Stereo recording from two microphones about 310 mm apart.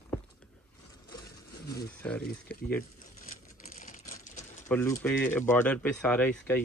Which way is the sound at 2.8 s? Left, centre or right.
Left.